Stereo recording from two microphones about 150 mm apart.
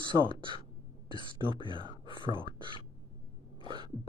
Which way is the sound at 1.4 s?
30° left (ahead or behind).